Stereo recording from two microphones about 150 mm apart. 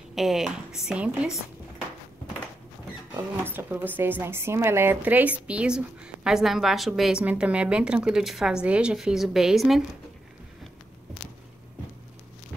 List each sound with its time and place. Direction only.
0.1 s a woman's voice: centre (ahead or behind)
3.4 s a woman's voice: 15° right (ahead or behind)